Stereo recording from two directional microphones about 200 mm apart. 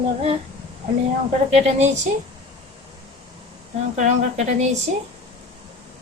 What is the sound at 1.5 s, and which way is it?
Speech, 35° right (ahead or behind).